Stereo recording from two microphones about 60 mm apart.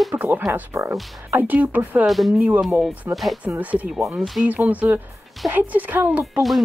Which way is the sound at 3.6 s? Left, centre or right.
Right.